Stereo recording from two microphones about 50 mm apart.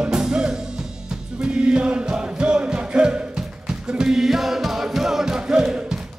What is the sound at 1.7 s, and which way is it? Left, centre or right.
Music, centre.